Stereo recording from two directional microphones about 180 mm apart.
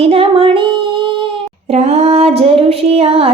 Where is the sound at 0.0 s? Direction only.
30° right (ahead or behind).